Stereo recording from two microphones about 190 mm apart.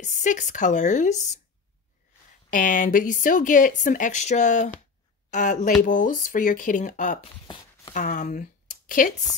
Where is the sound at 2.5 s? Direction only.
45° left (ahead or behind).